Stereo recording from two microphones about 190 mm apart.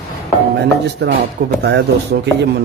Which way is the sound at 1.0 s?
60° right (ahead or behind).